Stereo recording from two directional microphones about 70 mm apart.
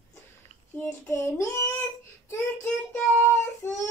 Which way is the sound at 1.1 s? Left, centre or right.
Left.